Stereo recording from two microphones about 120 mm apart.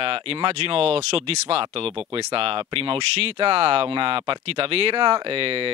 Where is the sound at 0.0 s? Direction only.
50° right (ahead or behind).